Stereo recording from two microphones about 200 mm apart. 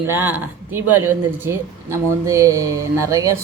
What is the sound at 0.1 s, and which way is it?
Speech, 10° right (ahead or behind).